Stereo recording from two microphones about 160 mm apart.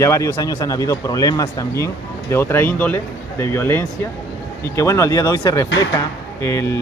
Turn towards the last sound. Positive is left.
turn(degrees=20)  # may be behind; listen again after turning